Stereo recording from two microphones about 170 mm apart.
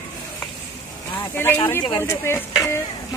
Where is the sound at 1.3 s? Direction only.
10° left (ahead or behind).